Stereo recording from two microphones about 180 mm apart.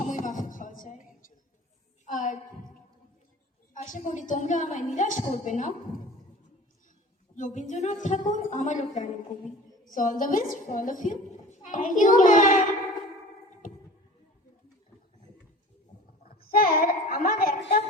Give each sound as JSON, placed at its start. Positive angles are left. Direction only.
{"t": 0.0, "sound": "music", "side_deg": 45}
{"t": 2.0, "sound": "child singing", "side_deg": 45}
{"t": 3.8, "sound": "a woman's voice", "side_deg": 45}
{"t": 7.3, "sound": "a woman's voice", "side_deg": 45}
{"t": 16.3, "sound": "a woman's voice", "side_deg": 55}